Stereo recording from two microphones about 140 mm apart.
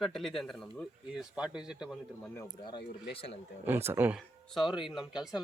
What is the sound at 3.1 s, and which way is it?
Speech, 45° left (ahead or behind).